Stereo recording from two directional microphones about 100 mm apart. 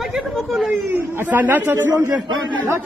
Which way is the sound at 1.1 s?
20° right (ahead or behind).